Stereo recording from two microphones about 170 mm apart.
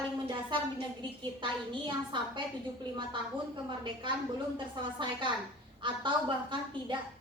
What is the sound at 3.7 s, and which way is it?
A woman's voice, 30° right (ahead or behind).